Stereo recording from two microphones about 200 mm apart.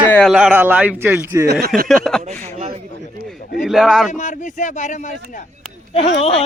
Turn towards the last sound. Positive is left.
turn(degrees=30)  # may be behind; listen again after turning